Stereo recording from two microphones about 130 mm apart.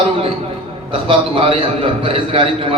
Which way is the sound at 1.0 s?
45° right (ahead or behind).